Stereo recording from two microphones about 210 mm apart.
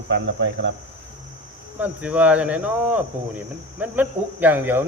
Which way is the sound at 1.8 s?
5° right (ahead or behind).